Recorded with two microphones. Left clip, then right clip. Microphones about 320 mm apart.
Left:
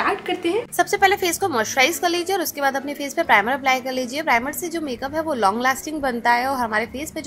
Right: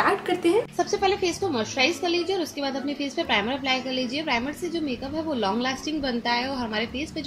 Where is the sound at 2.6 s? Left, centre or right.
Left.